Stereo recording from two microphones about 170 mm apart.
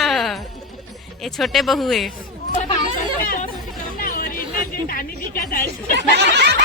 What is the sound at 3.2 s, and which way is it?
Chatter, 55° left (ahead or behind).